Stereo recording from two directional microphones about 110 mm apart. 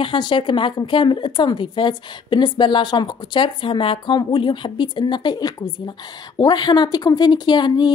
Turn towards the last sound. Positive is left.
turn(degrees=40)  # may be behind; listen again after turning